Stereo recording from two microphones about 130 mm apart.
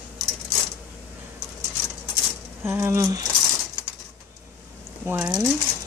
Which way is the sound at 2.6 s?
20° right (ahead or behind).